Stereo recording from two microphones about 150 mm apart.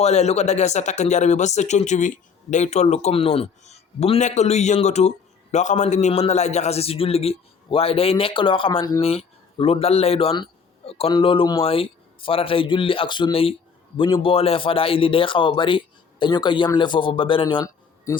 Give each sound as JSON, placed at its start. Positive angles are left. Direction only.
{"t": 0.0, "sound": "a man's voice", "side_deg": 50}